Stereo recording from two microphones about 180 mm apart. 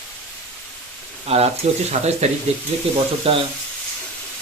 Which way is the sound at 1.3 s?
35° right (ahead or behind).